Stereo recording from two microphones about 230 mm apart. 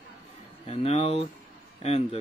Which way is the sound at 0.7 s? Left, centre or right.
Left.